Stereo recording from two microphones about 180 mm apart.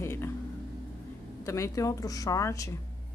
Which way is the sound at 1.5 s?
15° left (ahead or behind).